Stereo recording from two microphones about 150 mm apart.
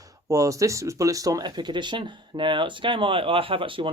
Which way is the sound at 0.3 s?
20° right (ahead or behind).